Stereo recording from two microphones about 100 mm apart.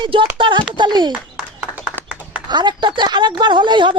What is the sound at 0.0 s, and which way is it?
A woman's voice, 55° right (ahead or behind).